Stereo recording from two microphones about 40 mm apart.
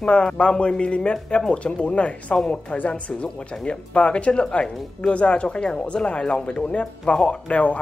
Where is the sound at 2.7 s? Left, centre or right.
Left.